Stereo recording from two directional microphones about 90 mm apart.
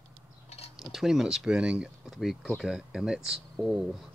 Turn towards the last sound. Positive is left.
turn(degrees=0)  # may be behind; listen again after turning